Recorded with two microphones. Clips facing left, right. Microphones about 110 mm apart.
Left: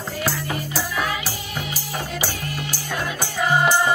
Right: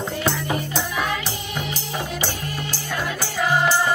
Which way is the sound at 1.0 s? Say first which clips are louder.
Right 1 dB; 10° left (ahead or behind).